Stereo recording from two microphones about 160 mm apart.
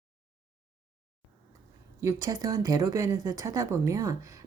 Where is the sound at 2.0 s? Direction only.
20° right (ahead or behind).